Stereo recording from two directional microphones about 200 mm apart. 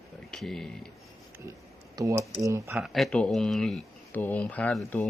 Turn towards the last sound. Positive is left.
turn(degrees=5)  # may be behind; listen again after turning